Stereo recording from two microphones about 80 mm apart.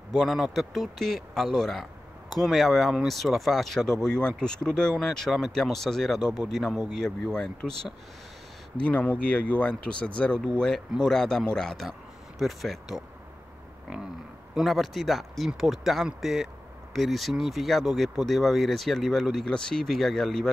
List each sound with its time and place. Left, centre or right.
0.1 s speech: centre
14.6 s speech: centre